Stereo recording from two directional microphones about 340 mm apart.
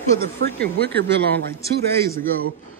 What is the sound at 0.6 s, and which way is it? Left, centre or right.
Speech, centre.